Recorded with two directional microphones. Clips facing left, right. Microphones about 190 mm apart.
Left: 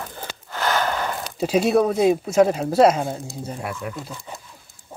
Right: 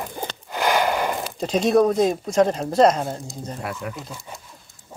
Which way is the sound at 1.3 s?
5° left (ahead or behind).